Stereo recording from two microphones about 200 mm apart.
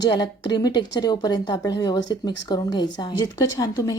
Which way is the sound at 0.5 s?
20° left (ahead or behind).